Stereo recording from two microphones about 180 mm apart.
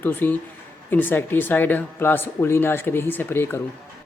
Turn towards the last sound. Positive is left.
turn(degrees=10)  # may be behind; listen again after turning